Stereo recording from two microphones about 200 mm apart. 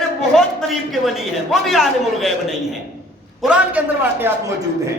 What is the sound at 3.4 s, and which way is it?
Speech, 5° right (ahead or behind).